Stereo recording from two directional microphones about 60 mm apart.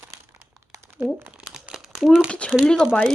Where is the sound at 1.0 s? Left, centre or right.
Right.